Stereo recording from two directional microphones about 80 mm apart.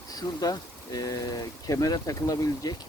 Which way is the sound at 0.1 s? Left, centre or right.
Left.